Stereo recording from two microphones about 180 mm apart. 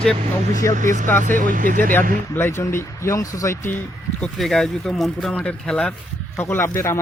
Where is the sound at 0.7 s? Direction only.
45° right (ahead or behind).